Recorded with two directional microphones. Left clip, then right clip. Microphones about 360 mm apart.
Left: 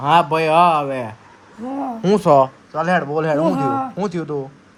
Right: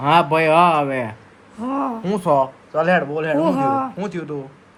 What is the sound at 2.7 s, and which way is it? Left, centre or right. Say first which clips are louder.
A man's voice: right 2 dB; centre.